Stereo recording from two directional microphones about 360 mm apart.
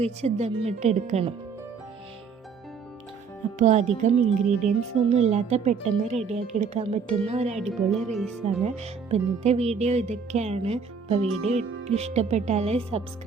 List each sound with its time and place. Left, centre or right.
0.0 s speech: centre
3.6 s speech: centre
7.6 s speech: centre
8.6 s speech: centre